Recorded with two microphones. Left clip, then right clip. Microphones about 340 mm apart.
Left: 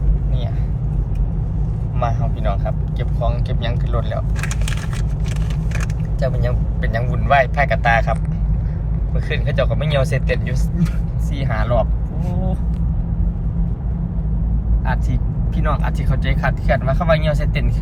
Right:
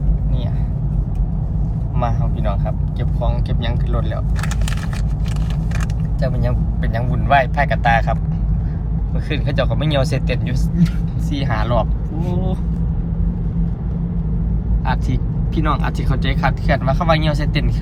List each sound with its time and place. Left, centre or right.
2.0 s vehicle: centre
3.2 s speech: centre
6.1 s speech: centre
11.3 s speech: centre
15.5 s speech: centre